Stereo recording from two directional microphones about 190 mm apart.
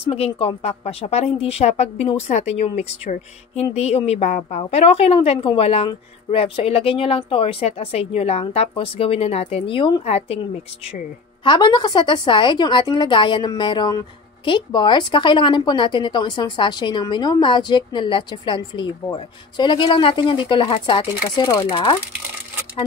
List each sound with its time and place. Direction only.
0.0 s a woman's voice: 30° left (ahead or behind)